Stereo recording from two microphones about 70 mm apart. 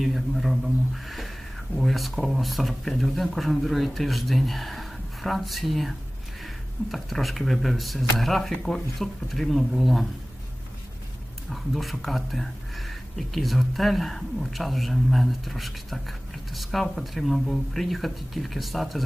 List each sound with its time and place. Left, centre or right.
0.0 s speech: centre
11.5 s speech: centre